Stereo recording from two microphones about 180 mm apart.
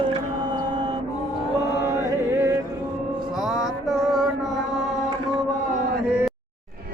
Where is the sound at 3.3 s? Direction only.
5° right (ahead or behind).